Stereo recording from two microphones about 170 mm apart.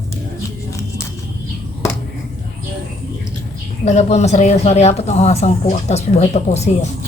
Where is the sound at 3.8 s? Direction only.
40° left (ahead or behind).